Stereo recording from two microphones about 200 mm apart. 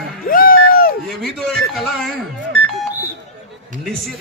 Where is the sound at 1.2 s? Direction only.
Centre (ahead or behind).